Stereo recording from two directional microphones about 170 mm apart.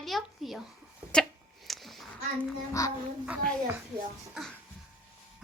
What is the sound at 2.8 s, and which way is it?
Speech, 20° left (ahead or behind).